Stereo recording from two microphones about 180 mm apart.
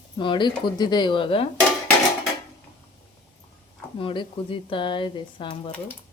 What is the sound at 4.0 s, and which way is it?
Speech, 30° left (ahead or behind).